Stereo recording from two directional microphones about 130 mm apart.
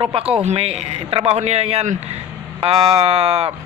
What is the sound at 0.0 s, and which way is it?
A man's voice, 45° right (ahead or behind).